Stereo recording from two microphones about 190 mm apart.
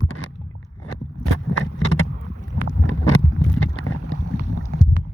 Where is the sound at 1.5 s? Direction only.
90° left.